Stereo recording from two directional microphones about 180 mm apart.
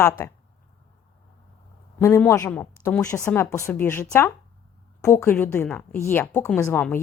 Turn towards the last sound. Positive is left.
turn(degrees=10)  # may be behind; listen again after turning